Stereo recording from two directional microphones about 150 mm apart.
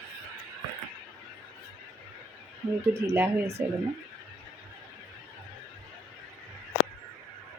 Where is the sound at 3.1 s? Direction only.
15° right (ahead or behind).